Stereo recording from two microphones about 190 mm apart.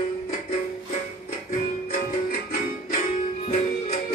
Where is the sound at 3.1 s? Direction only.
30° left (ahead or behind).